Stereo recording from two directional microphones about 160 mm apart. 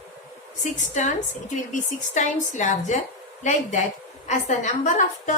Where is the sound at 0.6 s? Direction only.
50° left (ahead or behind).